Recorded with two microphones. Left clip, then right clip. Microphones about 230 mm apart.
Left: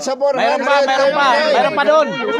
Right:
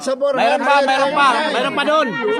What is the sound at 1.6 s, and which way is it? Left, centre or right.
Speech, centre.